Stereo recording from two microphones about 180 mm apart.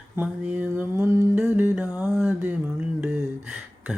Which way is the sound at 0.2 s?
10° right (ahead or behind).